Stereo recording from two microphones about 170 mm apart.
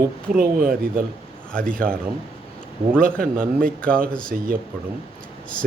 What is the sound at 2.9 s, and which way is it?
Speech, 55° right (ahead or behind).